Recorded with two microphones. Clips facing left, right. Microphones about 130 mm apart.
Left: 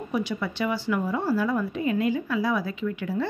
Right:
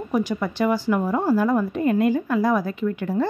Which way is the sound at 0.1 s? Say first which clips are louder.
Right 5 dB; 45° right (ahead or behind).